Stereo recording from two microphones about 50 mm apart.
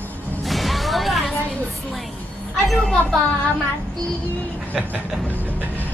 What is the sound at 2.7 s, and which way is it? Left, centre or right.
Speech, centre.